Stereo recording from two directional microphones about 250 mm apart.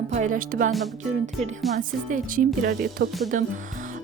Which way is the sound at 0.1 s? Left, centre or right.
Right.